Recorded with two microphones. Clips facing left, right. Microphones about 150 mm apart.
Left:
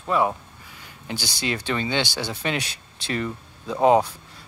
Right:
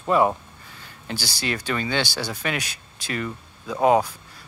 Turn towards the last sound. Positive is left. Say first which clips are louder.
# left 1 dB
turn(degrees=25)  # may be behind; listen again after turning